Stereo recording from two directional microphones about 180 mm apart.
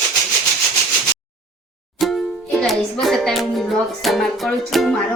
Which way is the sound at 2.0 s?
Centre (ahead or behind).